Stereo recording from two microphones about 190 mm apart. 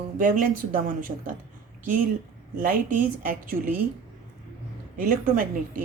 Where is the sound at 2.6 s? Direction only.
45° right (ahead or behind).